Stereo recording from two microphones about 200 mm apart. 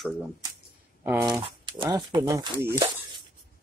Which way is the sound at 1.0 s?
10° right (ahead or behind).